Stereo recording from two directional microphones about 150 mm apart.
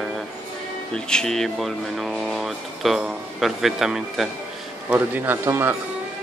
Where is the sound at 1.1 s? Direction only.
5° left (ahead or behind); by 5.8 s 15° right (ahead or behind).